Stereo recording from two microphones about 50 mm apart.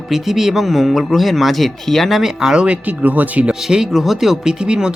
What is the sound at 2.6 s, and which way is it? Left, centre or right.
Speech, right.